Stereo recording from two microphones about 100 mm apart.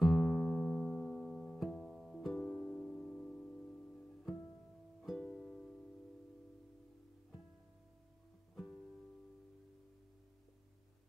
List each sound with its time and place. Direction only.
0.0 s music: centre (ahead or behind)
2.4 s music: 25° left (ahead or behind); by 5.7 s 5° left (ahead or behind)